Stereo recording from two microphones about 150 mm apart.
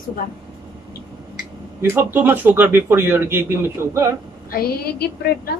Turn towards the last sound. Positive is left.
turn(degrees=90)